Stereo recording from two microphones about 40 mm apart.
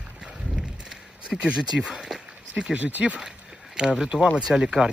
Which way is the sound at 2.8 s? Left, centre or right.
Right.